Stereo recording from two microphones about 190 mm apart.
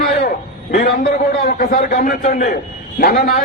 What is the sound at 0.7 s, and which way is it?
Speech, 35° left (ahead or behind).